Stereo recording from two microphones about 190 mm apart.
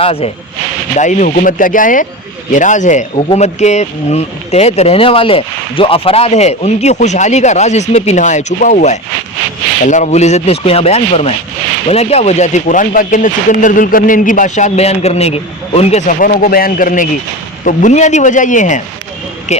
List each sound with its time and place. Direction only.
0.0 s speech: 30° left (ahead or behind)
0.9 s speech: 40° left (ahead or behind)